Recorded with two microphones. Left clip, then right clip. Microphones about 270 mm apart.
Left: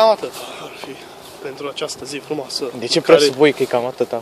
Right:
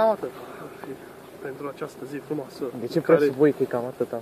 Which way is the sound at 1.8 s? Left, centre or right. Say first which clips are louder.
Left 8 dB; left.